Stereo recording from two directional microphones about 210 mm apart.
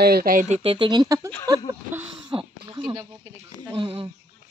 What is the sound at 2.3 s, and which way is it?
Speech, 25° right (ahead or behind).